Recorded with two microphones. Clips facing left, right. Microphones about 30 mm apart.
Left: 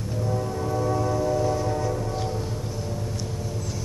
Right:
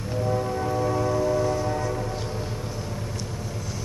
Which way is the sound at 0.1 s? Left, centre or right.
Centre.